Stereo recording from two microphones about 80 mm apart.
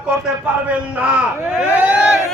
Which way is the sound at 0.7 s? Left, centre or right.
Centre.